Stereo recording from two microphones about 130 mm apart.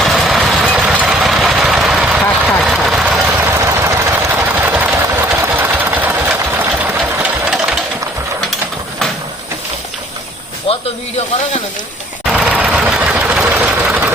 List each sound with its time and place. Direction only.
0.0 s vehicle: centre (ahead or behind)
5.3 s sewing machine: 15° right (ahead or behind)
10.7 s snake: 45° left (ahead or behind)
12.2 s a sound: 5° right (ahead or behind)
12.7 s sewing machine: 10° right (ahead or behind)